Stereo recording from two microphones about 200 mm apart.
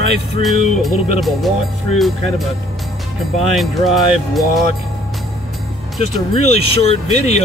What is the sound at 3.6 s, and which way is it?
Speech, centre (ahead or behind).